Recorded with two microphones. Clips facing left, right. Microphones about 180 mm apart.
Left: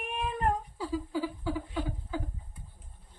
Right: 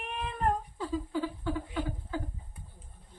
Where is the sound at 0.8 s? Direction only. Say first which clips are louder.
Even; 10° left (ahead or behind).